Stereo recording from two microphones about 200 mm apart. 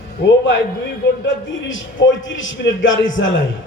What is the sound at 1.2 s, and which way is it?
A man's voice, 70° left (ahead or behind).